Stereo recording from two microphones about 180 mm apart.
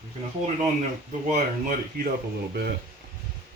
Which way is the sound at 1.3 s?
50° right (ahead or behind).